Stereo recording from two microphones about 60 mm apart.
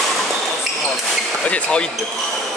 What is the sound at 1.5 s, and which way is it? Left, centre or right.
Speech, centre.